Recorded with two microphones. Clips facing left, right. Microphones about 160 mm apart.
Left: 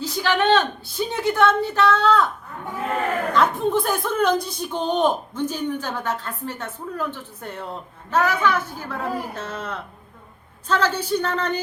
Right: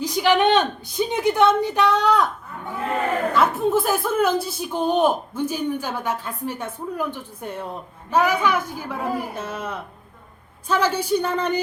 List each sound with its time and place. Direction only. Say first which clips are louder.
0.0 s a woman's voice: right 3 dB; 15° right (ahead or behind)
3.3 s speech: even; 5° right (ahead or behind)